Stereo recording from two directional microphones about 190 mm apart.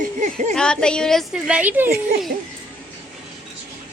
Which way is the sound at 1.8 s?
50° right (ahead or behind).